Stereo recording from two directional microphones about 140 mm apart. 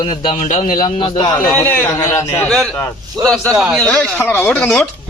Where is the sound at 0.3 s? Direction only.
65° left (ahead or behind).